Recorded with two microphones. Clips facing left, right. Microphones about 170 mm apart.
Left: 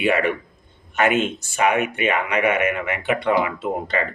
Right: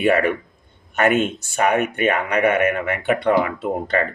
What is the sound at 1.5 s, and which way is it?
Speech, 45° right (ahead or behind).